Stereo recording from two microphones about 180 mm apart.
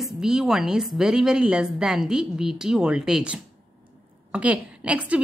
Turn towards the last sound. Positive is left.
turn(degrees=-5)  # may be behind; listen again after turning